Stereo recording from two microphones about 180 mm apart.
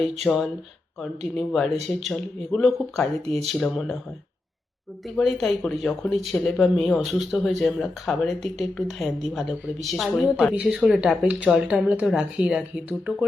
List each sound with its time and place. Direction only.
0.0 s speech: centre (ahead or behind)
5.0 s speech: centre (ahead or behind)